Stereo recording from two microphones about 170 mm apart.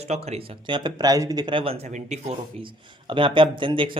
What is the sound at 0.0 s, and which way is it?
Speech, 40° right (ahead or behind).